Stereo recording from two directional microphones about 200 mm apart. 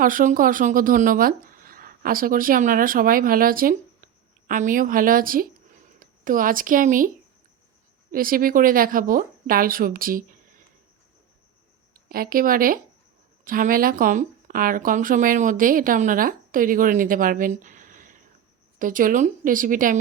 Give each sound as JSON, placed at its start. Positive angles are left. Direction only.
{"t": 0.0, "sound": "speech", "side_deg": -45}
{"t": 8.1, "sound": "speech", "side_deg": -45}
{"t": 12.0, "sound": "speech", "side_deg": -45}